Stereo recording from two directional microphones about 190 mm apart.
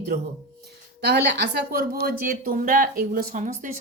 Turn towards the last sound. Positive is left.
turn(degrees=-45)  # may be behind; listen again after turning